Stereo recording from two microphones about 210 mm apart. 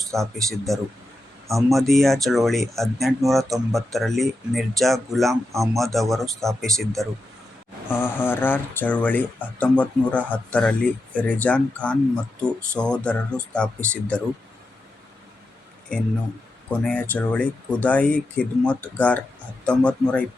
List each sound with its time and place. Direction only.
0.1 s speech: centre (ahead or behind)
15.9 s speech: 5° left (ahead or behind)